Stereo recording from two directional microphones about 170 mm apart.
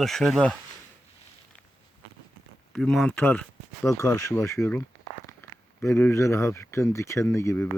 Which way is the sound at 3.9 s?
20° left (ahead or behind).